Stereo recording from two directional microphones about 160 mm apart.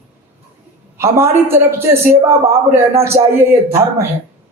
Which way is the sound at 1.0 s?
15° right (ahead or behind).